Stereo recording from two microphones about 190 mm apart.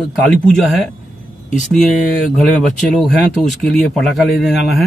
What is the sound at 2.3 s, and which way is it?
Speech, centre (ahead or behind).